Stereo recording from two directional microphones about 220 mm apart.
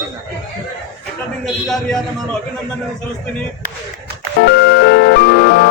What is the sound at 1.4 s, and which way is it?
Speech, centre (ahead or behind).